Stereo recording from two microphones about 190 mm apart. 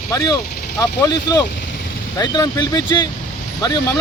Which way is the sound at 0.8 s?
20° left (ahead or behind).